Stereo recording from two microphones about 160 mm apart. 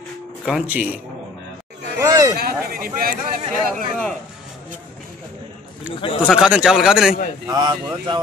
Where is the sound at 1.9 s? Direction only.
20° right (ahead or behind).